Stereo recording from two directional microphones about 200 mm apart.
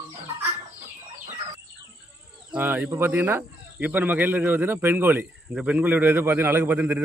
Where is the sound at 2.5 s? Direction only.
10° right (ahead or behind).